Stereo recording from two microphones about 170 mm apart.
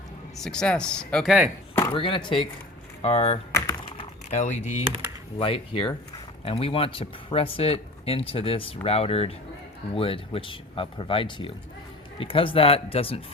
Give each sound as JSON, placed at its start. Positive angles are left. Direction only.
{"t": 0.3, "sound": "speech", "side_deg": 5}
{"t": 1.7, "sound": "chopping", "side_deg": 20}
{"t": 2.0, "sound": "speech", "side_deg": 30}
{"t": 5.4, "sound": "speech", "side_deg": 30}